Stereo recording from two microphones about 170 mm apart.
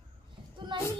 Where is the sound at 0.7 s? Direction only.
25° right (ahead or behind).